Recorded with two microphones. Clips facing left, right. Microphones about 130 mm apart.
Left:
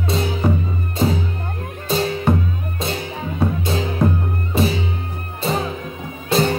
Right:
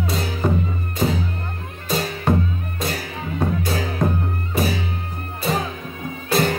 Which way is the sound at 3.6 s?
25° left (ahead or behind).